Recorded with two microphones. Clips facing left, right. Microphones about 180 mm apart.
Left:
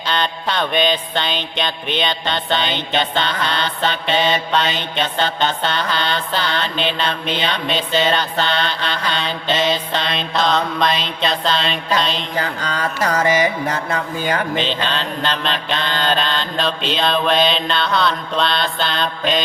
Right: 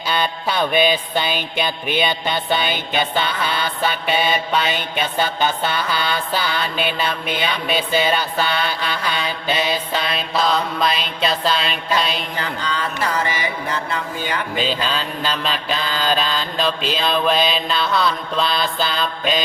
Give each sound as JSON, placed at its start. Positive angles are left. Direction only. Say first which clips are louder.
{"t": 0.1, "sound": "mantra", "louder": "even", "side_deg": -10}
{"t": 12.4, "sound": "music", "louder": "left 4 dB", "side_deg": 45}
{"t": 14.5, "sound": "mantra", "louder": "left 1 dB", "side_deg": -5}